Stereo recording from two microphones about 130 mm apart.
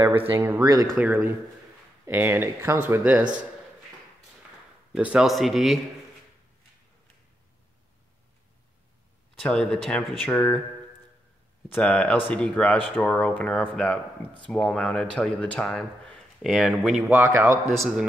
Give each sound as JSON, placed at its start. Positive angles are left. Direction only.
{"t": 0.3, "sound": "speech", "side_deg": -15}
{"t": 4.9, "sound": "speech", "side_deg": -5}
{"t": 9.3, "sound": "speech", "side_deg": 5}
{"t": 11.7, "sound": "speech", "side_deg": 10}
{"t": 16.5, "sound": "speech", "side_deg": 0}
{"t": 17.1, "sound": "a man's voice", "side_deg": -20}